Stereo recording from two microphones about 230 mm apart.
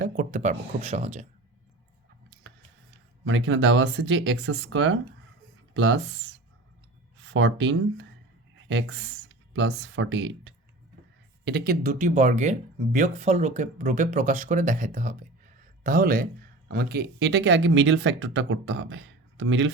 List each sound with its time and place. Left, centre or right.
0.0 s speech: right
3.2 s speech: right
11.4 s speech: right